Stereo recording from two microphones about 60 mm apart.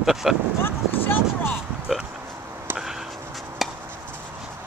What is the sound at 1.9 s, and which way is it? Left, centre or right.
Oink, centre.